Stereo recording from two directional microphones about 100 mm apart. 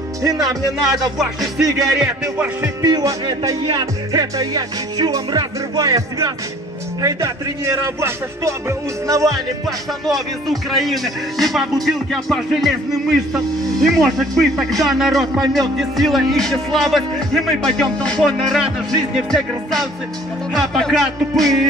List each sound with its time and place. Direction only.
0.2 s music: 35° right (ahead or behind)
1.1 s speech: 5° right (ahead or behind)
2.6 s music: 40° right (ahead or behind)
9.7 s speech: centre (ahead or behind)